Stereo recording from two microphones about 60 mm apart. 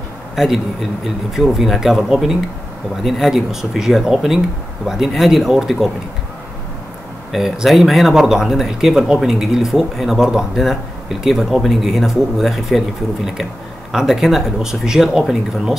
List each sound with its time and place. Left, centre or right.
0.4 s speech: centre
7.3 s speech: centre